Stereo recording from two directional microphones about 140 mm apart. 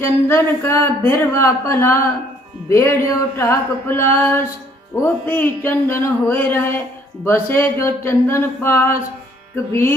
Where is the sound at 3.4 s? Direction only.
15° left (ahead or behind).